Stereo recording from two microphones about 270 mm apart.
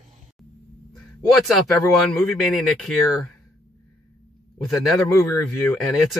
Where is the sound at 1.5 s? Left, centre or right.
Centre.